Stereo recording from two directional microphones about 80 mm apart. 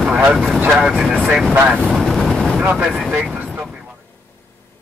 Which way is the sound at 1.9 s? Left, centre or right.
Centre.